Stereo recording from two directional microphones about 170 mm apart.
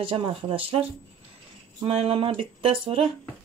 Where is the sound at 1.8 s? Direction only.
35° right (ahead or behind).